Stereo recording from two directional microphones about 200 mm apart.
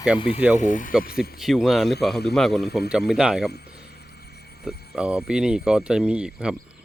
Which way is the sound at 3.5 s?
55° left (ahead or behind).